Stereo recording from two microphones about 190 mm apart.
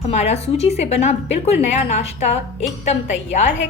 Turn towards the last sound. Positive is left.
turn(degrees=35)  # may be behind; listen again after turning